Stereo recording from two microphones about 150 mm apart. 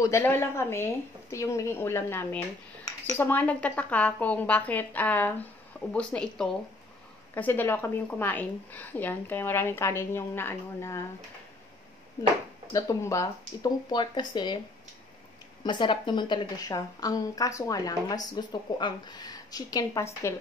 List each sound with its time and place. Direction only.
0.0 s a woman's voice: 15° left (ahead or behind)
12.7 s a woman's voice: 20° left (ahead or behind)
15.6 s a woman's voice: 30° left (ahead or behind)